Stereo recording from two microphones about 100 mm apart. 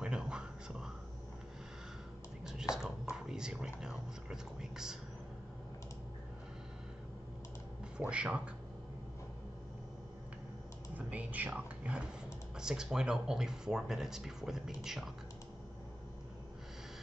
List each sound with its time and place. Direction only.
0.0 s whispering: 10° right (ahead or behind)
2.7 s speech: 5° right (ahead or behind)
8.0 s speech: 10° right (ahead or behind)
11.0 s speech: 15° right (ahead or behind)